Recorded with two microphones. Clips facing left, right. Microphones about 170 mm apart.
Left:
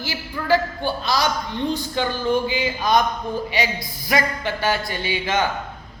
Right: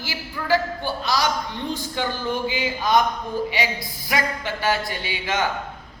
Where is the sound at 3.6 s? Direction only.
15° left (ahead or behind).